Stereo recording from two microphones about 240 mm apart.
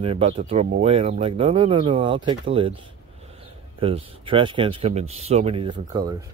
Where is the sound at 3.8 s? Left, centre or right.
Right.